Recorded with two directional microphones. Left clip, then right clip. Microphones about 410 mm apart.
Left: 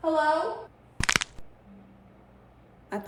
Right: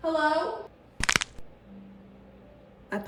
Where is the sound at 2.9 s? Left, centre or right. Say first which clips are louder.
Right 1 dB; centre.